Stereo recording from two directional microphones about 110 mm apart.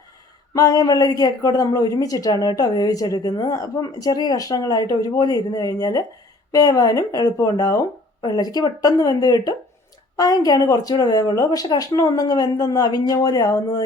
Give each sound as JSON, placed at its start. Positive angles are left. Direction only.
{"t": 0.5, "sound": "speech", "side_deg": 35}